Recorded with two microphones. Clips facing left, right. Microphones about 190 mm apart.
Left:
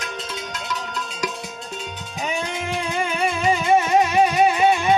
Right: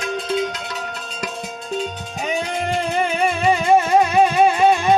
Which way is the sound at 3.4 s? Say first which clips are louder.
Right 2 dB; 55° right (ahead or behind).